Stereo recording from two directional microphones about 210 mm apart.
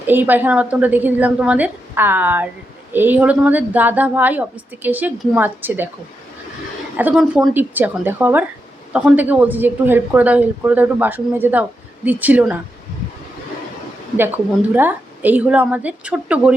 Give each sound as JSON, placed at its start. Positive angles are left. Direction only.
{"t": 0.0, "sound": "a woman's voice", "side_deg": -10}
{"t": 6.9, "sound": "a woman's voice", "side_deg": -5}
{"t": 14.7, "sound": "a woman's voice", "side_deg": -10}